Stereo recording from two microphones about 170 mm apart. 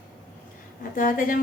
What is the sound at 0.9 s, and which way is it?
Speech, 55° left (ahead or behind).